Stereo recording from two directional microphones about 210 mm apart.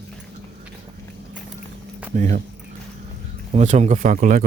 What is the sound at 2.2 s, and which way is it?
Speech, 35° right (ahead or behind).